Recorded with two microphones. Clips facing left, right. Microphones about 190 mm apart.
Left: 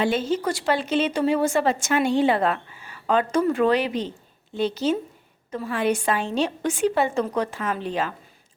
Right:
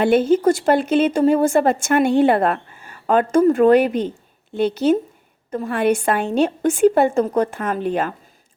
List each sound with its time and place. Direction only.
0.0 s a woman's voice: 55° right (ahead or behind)